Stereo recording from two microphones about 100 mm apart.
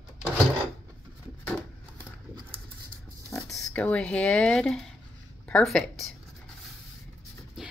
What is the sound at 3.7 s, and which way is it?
Speech, 15° left (ahead or behind).